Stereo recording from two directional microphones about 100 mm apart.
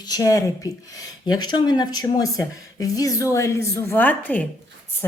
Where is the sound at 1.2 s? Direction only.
45° left (ahead or behind).